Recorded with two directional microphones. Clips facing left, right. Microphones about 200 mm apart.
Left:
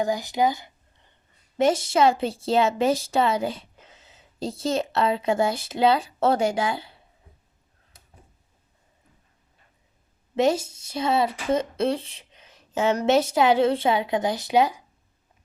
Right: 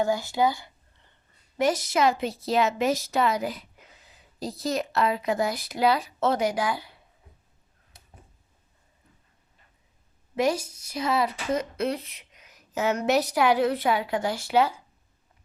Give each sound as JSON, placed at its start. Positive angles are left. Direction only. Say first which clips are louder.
{"t": 0.0, "sound": "a woman's voice", "louder": "left 1 dB", "side_deg": 15}
{"t": 10.3, "sound": "a woman's voice", "louder": "left 3 dB", "side_deg": 25}